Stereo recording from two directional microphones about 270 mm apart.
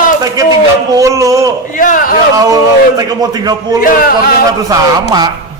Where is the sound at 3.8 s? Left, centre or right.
Left.